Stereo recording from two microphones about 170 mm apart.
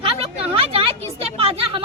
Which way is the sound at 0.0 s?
35° right (ahead or behind).